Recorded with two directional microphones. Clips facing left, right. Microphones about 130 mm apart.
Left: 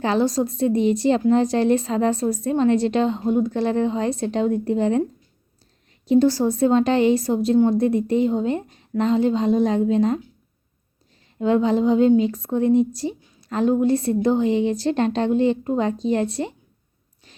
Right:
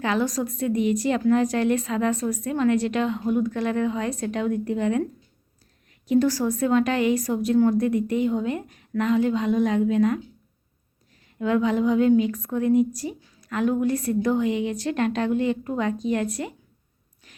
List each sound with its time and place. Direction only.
0.0 s a woman's voice: 30° left (ahead or behind)
6.1 s a woman's voice: 30° left (ahead or behind)
11.3 s a woman's voice: 30° left (ahead or behind)